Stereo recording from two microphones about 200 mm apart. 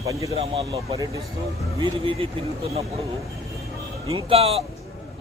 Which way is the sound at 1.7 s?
25° right (ahead or behind).